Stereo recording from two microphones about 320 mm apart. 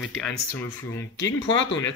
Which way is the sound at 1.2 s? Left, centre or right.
Left.